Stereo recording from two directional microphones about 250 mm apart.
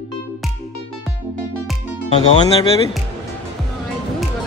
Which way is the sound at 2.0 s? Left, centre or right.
Left.